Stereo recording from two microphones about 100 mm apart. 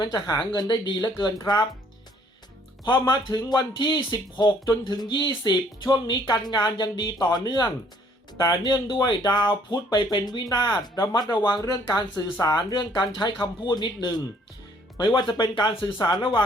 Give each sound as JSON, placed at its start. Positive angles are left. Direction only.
{"t": 0.0, "sound": "speech", "side_deg": 40}
{"t": 2.8, "sound": "speech", "side_deg": 45}